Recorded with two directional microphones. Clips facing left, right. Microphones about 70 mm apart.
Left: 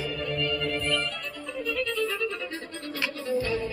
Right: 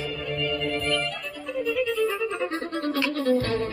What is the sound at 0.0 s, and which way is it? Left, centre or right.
Music, centre.